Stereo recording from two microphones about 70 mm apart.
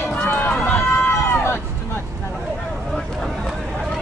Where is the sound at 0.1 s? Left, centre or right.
Left.